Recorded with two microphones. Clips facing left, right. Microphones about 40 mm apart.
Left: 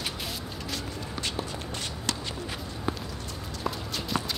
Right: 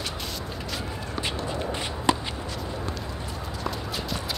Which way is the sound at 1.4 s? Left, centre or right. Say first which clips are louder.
Right 6 dB; centre.